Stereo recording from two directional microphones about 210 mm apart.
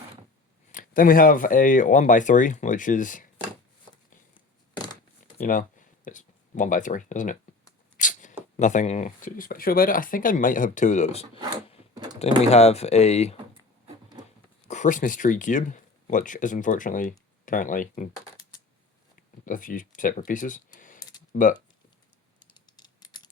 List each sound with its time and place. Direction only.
0.7 s speech: 40° left (ahead or behind)
5.4 s speech: 40° left (ahead or behind)
7.9 s a sound: 35° left (ahead or behind)
8.5 s speech: 35° left (ahead or behind)
11.3 s a sound: 20° right (ahead or behind)
12.4 s speech: 30° left (ahead or behind)
14.7 s speech: 35° left (ahead or behind)
19.5 s speech: 40° left (ahead or behind)
22.4 s computer keyboard: 20° left (ahead or behind)